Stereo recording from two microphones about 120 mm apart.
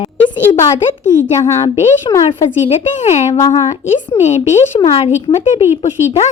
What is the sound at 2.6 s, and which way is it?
Speech, 70° left (ahead or behind).